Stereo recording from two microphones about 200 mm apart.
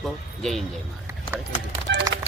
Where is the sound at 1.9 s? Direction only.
60° right (ahead or behind).